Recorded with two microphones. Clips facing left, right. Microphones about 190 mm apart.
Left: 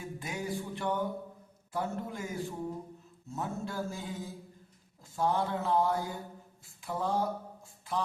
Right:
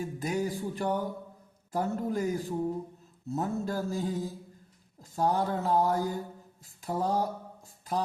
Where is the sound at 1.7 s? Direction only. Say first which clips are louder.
Right 6 dB; 40° right (ahead or behind).